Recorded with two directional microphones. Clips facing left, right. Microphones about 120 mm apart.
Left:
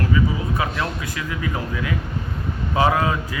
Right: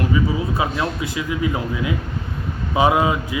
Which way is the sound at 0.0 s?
20° right (ahead or behind).